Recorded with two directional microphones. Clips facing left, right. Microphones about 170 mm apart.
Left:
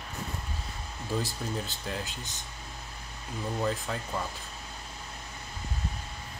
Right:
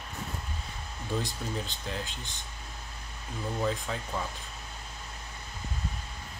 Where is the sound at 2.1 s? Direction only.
40° left (ahead or behind).